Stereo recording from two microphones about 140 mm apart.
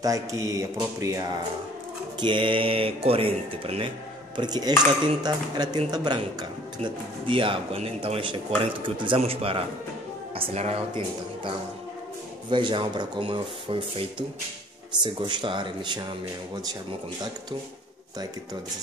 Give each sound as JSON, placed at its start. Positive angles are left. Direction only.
{"t": 0.0, "sound": "speech", "side_deg": -25}
{"t": 2.1, "sound": "speech", "side_deg": -35}
{"t": 4.4, "sound": "speech", "side_deg": -30}
{"t": 15.0, "sound": "speech", "side_deg": -35}